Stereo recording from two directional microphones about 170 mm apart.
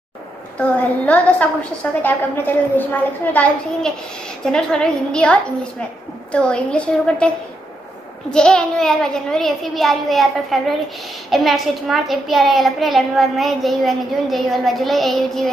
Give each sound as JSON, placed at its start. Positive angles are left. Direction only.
{"t": 0.6, "sound": "a woman's voice", "side_deg": 10}